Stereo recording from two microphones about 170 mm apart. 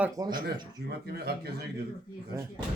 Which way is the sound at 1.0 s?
70° right (ahead or behind).